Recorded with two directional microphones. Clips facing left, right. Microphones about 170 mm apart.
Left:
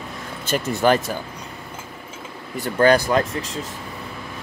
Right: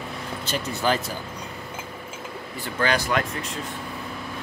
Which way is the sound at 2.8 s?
45° left (ahead or behind).